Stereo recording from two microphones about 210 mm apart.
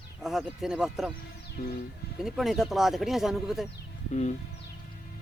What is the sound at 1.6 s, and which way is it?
Speech, 50° left (ahead or behind).